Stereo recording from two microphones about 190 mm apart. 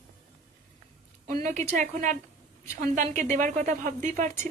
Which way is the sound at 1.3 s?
45° right (ahead or behind).